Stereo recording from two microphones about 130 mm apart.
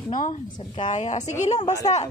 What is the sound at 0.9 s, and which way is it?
Speech, 60° left (ahead or behind).